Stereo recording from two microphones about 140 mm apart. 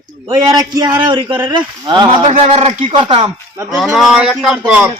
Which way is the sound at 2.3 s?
45° right (ahead or behind).